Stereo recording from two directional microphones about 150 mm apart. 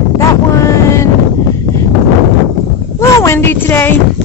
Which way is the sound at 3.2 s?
15° left (ahead or behind).